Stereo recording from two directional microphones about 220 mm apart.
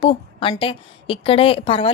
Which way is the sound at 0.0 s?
25° left (ahead or behind).